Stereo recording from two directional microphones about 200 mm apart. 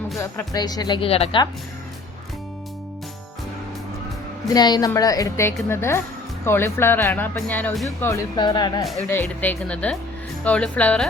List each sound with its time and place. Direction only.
0.2 s speech: 15° left (ahead or behind)
4.4 s speech: 20° left (ahead or behind); by 7.9 s 5° left (ahead or behind)
7.9 s speech: 15° left (ahead or behind)
9.0 s a woman's voice: 10° left (ahead or behind)